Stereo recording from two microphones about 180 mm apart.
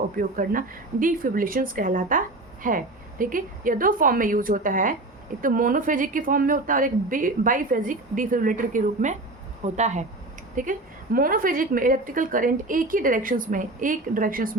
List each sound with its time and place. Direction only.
0.2 s a woman's voice: 50° right (ahead or behind)